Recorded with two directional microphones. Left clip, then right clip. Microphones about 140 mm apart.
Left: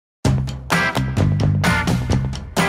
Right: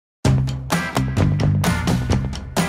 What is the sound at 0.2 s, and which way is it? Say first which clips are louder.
Music: right 1 dB; centre (ahead or behind).